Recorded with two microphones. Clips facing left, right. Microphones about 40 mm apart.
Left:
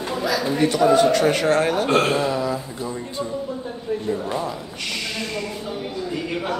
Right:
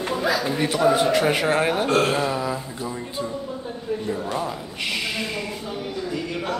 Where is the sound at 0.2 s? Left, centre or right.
Centre.